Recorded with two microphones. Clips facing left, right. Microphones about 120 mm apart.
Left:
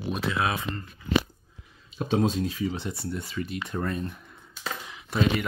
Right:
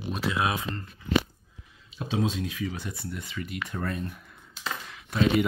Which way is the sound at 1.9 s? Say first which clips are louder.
Left 4 dB; 45° left (ahead or behind).